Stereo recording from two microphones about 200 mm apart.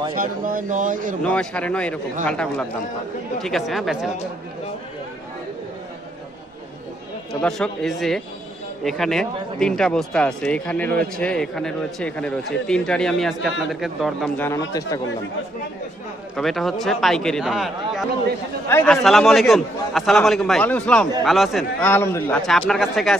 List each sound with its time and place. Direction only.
0.1 s speech: 45° right (ahead or behind)
1.2 s a man's voice: 5° left (ahead or behind)
7.4 s a man's voice: centre (ahead or behind)
16.3 s a man's voice: centre (ahead or behind)